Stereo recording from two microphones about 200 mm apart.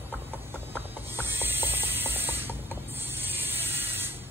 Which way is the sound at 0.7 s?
10° right (ahead or behind).